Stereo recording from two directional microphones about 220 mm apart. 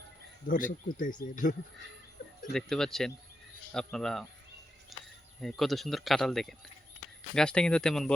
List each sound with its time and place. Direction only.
0.4 s speech: 40° left (ahead or behind)
2.5 s speech: centre (ahead or behind)
4.9 s a sound: centre (ahead or behind)
5.4 s speech: centre (ahead or behind)